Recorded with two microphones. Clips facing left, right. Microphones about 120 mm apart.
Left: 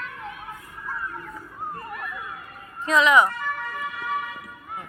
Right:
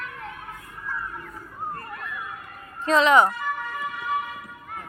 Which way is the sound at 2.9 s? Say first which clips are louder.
Right 1 dB; 30° right (ahead or behind).